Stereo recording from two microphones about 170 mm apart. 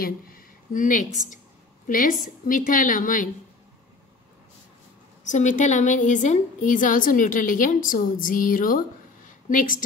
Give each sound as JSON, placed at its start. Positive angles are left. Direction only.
{"t": 0.0, "sound": "a woman's voice", "side_deg": 55}
{"t": 5.2, "sound": "a woman's voice", "side_deg": 45}